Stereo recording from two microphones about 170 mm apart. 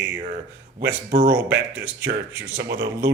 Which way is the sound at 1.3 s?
10° right (ahead or behind).